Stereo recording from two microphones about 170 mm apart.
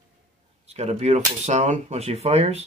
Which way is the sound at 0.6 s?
40° right (ahead or behind).